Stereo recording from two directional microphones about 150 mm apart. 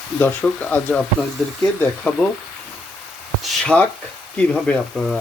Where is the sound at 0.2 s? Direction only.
10° left (ahead or behind).